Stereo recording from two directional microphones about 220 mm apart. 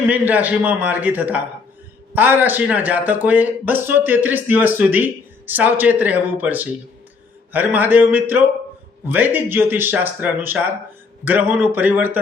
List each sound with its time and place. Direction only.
0.1 s speech: 5° right (ahead or behind)